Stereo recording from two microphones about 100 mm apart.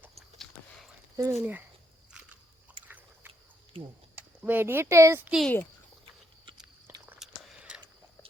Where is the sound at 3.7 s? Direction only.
65° right (ahead or behind).